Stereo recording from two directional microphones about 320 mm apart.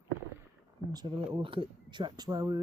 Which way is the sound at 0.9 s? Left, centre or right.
Centre.